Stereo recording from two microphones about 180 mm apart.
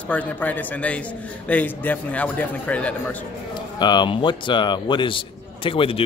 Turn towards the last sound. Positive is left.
turn(degrees=30)  # may be behind; listen again after turning